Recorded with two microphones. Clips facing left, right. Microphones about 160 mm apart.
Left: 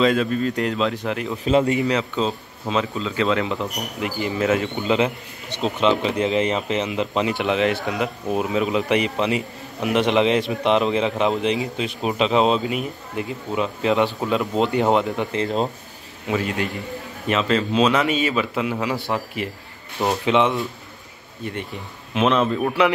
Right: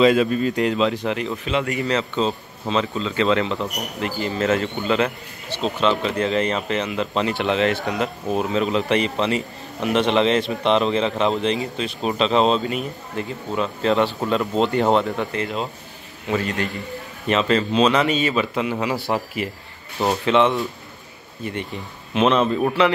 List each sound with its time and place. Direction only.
0.0 s a man's voice: 10° right (ahead or behind)
1.4 s speech: 35° left (ahead or behind)
1.8 s speech: 10° left (ahead or behind)
15.4 s speech: 35° left (ahead or behind)
16.3 s a man's voice: 5° left (ahead or behind)
20.2 s speech: 10° left (ahead or behind)
22.1 s a man's voice: centre (ahead or behind)